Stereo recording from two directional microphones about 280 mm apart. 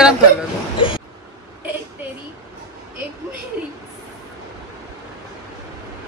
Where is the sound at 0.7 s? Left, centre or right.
Centre.